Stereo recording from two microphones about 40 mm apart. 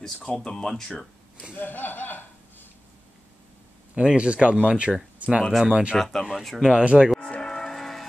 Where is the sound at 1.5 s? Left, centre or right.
Left.